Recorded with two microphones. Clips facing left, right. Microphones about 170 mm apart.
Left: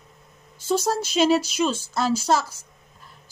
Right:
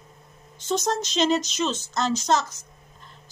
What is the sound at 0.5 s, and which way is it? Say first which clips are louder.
Speech: left 2 dB; 10° left (ahead or behind).